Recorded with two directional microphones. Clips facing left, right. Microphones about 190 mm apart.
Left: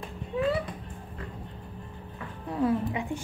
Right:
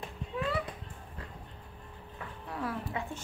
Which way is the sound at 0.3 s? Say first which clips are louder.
Left 7 dB; 25° left (ahead or behind).